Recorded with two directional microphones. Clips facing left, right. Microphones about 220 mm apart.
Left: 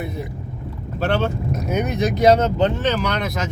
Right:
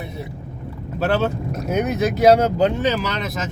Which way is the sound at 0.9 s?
5° right (ahead or behind).